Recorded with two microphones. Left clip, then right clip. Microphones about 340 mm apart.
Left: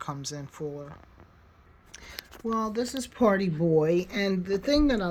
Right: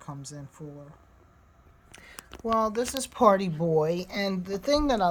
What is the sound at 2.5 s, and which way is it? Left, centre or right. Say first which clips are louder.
Speech: right 4 dB; centre.